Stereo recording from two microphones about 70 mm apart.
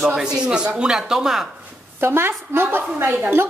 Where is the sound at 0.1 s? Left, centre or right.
Centre.